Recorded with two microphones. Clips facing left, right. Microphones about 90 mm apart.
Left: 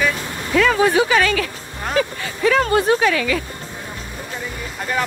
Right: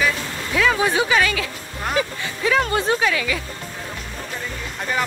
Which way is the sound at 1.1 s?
15° right (ahead or behind).